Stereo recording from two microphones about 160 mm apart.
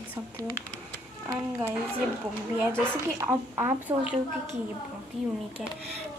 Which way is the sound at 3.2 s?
15° right (ahead or behind).